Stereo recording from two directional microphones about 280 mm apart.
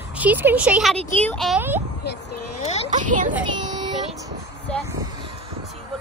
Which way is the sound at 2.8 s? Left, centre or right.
Right.